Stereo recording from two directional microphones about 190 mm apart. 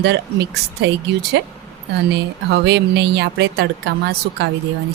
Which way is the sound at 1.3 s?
65° right (ahead or behind).